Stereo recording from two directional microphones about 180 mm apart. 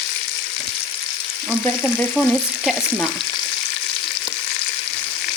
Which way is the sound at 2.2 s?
Centre (ahead or behind).